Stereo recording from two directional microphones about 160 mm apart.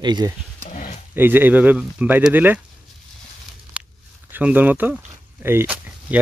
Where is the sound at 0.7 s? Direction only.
50° left (ahead or behind).